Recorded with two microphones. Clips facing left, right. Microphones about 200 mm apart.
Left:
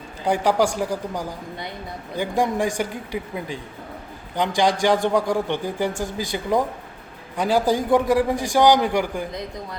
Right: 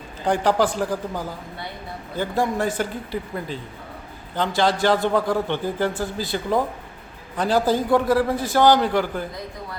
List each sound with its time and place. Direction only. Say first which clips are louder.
0.3 s a man's voice: even; 10° left (ahead or behind)